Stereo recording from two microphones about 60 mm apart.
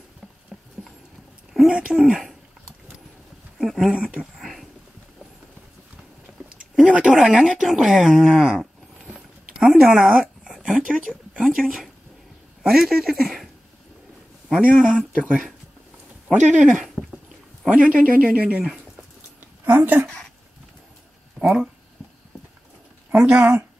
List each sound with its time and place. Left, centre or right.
0.5 s rodents: centre
1.7 s speech: centre
3.5 s a sound: centre
3.9 s speech: centre
4.2 s a sound: centre
6.9 s speech: centre
10.2 s a sound: centre
11.4 s speech: centre
14.6 s a man's voice: centre
19.6 s a woman's voice: right
21.4 s a sound: right
23.1 s speech: centre